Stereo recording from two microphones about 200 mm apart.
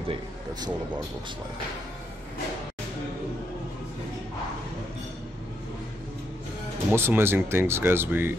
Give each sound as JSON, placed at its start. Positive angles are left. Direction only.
{"t": 0.1, "sound": "speech", "side_deg": -20}
{"t": 6.9, "sound": "speech", "side_deg": -10}